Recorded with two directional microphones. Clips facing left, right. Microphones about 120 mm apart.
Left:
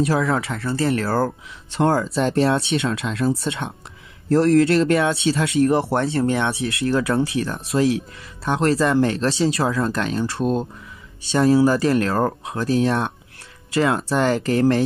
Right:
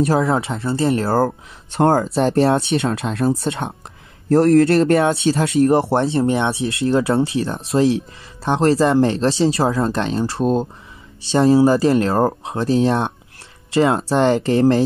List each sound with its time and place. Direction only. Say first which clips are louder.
0.0 s speech: right 3 dB; 30° right (ahead or behind)
1.7 s speech: right 3 dB; 50° right (ahead or behind)
2.1 s speech: right 3 dB; 30° right (ahead or behind)
4.3 s speech: right 3 dB; 50° right (ahead or behind)
4.9 s speech: right 3 dB; 30° right (ahead or behind)